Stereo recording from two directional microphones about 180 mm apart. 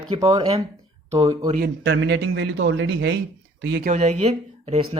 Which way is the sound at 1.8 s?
85° right.